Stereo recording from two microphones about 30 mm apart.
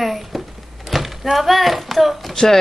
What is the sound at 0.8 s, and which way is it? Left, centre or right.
Speech, centre.